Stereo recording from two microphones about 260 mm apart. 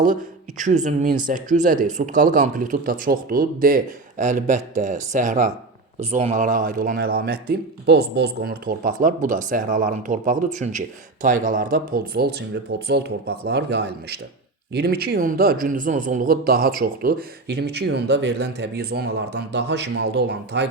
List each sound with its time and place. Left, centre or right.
0.6 s speech: right